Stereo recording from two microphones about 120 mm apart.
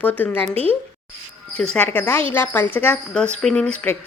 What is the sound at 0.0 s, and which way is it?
Speech, 15° left (ahead or behind).